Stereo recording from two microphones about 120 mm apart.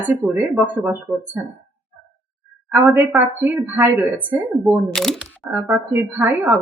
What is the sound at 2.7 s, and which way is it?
A woman's voice, 15° right (ahead or behind).